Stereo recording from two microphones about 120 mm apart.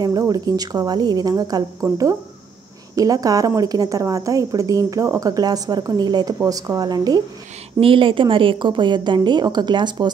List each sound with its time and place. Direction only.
0.0 s a woman's voice: 30° right (ahead or behind)
7.8 s a woman's voice: 45° right (ahead or behind)